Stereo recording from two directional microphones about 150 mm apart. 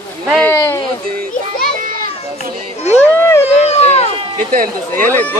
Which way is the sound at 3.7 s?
45° left (ahead or behind).